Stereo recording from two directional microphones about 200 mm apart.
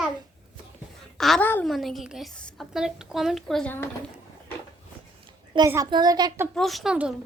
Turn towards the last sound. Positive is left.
turn(degrees=-5)  # may be behind; listen again after turning